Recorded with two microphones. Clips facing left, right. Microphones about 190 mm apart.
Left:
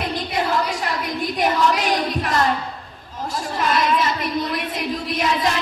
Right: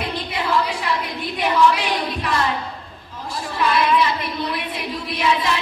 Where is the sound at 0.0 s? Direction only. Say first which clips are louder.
Left 2 dB; 45° left (ahead or behind).